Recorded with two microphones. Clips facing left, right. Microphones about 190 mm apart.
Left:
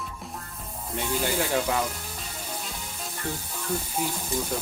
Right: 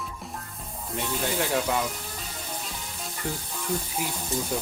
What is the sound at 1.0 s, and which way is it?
Speech, centre (ahead or behind).